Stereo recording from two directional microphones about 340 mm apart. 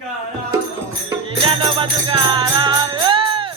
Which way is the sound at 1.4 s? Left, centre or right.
Centre.